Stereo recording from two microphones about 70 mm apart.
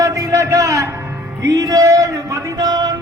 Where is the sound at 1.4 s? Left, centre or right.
Right.